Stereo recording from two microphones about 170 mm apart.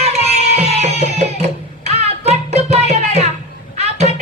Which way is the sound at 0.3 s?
40° right (ahead or behind).